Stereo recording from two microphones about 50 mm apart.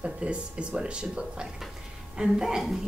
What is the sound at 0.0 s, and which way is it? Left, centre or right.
Speech, right.